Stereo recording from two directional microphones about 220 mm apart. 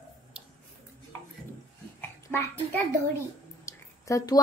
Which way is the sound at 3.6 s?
15° left (ahead or behind).